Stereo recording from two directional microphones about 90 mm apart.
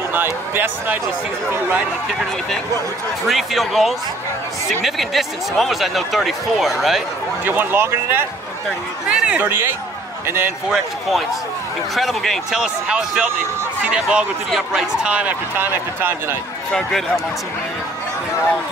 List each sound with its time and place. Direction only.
0.1 s speech: 25° right (ahead or behind)
3.3 s speech: centre (ahead or behind)
7.4 s speech: 25° right (ahead or behind)
9.0 s speech: 10° right (ahead or behind)
9.4 s speech: 25° right (ahead or behind)
10.7 s speech: centre (ahead or behind)
15.5 s speech: 25° right (ahead or behind)